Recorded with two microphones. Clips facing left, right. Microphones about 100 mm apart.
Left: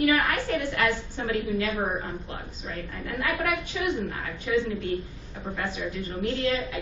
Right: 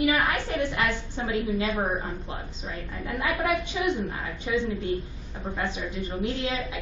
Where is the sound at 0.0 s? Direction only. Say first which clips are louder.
Left 1 dB; 20° right (ahead or behind).